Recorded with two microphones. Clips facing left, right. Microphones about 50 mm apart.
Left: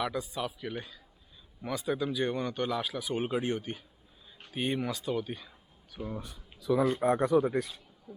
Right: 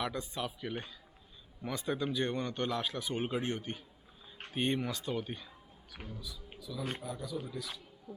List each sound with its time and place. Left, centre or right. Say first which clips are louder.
0.0 s speech: left 4 dB; centre
6.1 s speech: left 6 dB; left
6.6 s a man's voice: left 14 dB; left